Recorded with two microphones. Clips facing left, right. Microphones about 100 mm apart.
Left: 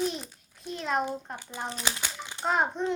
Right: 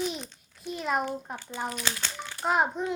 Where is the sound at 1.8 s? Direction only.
15° left (ahead or behind).